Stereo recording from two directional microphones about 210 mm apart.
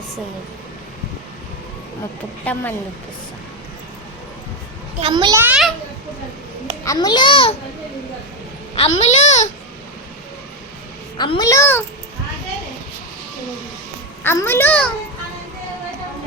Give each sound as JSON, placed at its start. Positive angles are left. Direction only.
{"t": 2.4, "sound": "a child's voice", "side_deg": 10}
{"t": 4.9, "sound": "a child's voice", "side_deg": -25}
{"t": 6.8, "sound": "a child's voice", "side_deg": 15}
{"t": 9.0, "sound": "a child's voice", "side_deg": 35}
{"t": 11.2, "sound": "a child's voice", "side_deg": 20}
{"t": 14.3, "sound": "a child's voice", "side_deg": 10}